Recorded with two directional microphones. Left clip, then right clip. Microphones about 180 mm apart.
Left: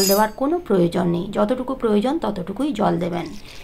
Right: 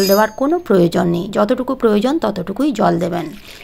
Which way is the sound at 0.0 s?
35° right (ahead or behind).